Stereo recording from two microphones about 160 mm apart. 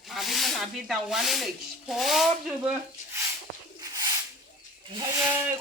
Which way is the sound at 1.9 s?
Centre (ahead or behind).